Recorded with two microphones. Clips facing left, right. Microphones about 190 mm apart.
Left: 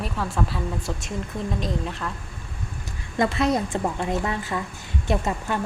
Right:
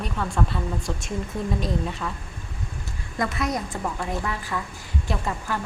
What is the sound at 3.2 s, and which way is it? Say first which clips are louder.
A woman's voice: left 5 dB; 30° left (ahead or behind).